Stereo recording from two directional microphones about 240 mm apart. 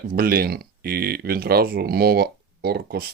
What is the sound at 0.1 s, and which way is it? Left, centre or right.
Speech, right.